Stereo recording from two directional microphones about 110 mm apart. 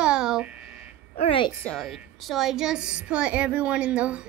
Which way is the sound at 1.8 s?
Centre (ahead or behind).